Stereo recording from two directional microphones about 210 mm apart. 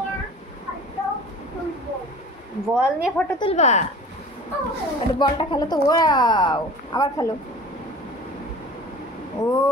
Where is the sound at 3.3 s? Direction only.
30° left (ahead or behind).